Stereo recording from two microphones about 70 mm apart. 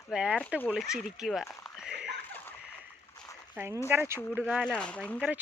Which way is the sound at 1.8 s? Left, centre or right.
Centre.